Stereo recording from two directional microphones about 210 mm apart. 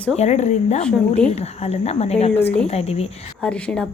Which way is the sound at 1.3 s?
30° left (ahead or behind).